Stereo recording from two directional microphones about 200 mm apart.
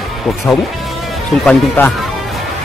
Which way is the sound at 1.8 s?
10° left (ahead or behind).